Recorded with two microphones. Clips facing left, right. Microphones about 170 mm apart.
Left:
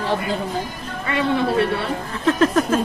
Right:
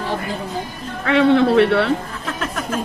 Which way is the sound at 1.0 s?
70° right (ahead or behind).